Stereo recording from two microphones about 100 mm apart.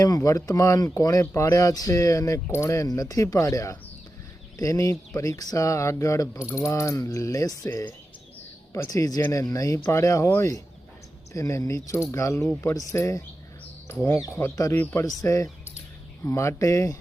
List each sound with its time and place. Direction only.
0.0 s speech: 35° left (ahead or behind)
15.2 s speech: 35° left (ahead or behind)